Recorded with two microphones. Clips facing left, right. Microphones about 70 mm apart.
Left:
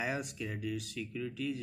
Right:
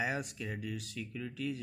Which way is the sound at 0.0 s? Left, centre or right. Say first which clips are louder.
Even; right.